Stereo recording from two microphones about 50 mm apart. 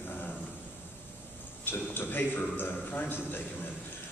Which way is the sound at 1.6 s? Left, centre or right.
Left.